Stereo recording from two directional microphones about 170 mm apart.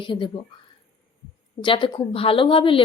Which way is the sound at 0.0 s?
30° left (ahead or behind).